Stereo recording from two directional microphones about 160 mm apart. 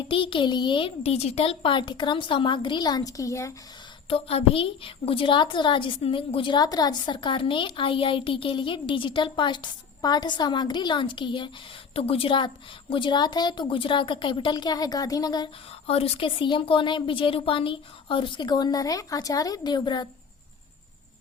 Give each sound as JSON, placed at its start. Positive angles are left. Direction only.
{"t": 0.1, "sound": "a woman's voice", "side_deg": 30}
{"t": 4.1, "sound": "a woman's voice", "side_deg": 35}
{"t": 15.9, "sound": "a woman's voice", "side_deg": 40}